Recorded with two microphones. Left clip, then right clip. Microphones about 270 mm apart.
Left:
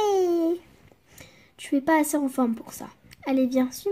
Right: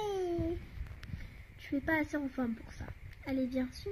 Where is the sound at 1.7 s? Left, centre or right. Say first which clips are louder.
Left 11 dB; centre.